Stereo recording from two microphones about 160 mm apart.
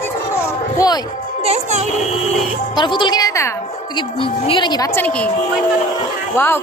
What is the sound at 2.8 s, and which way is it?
Speech, 30° left (ahead or behind).